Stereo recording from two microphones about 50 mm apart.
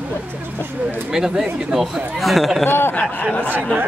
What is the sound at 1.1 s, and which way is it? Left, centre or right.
Speech, centre.